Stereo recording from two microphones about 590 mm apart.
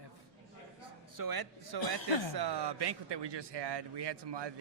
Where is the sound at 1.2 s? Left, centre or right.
Right.